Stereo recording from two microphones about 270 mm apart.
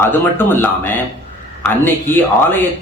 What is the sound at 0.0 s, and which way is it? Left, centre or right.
Speech, centre.